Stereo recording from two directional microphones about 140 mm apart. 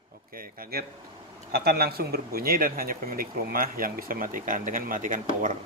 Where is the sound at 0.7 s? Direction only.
90° right.